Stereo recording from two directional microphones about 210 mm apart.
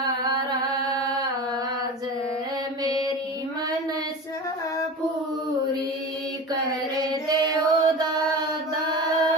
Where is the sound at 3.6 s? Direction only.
15° right (ahead or behind).